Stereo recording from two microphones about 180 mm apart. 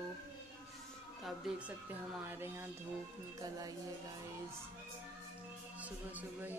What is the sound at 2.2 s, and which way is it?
Speech, 15° right (ahead or behind).